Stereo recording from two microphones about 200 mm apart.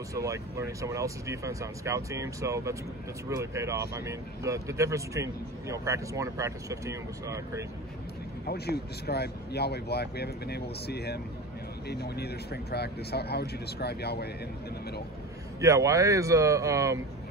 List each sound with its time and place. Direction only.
0.1 s speech: 15° right (ahead or behind)
8.5 s speech: 50° left (ahead or behind)
15.6 s speech: 15° right (ahead or behind)